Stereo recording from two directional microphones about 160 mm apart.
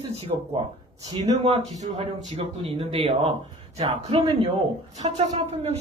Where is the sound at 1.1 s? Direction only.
45° right (ahead or behind).